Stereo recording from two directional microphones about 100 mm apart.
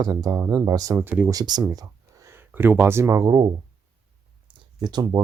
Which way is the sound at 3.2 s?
45° right (ahead or behind).